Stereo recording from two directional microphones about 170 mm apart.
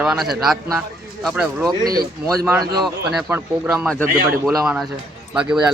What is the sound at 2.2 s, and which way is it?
Speech, 20° right (ahead or behind).